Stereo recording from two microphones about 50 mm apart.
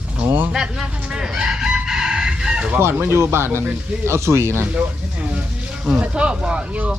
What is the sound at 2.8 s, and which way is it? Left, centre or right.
Speech, right.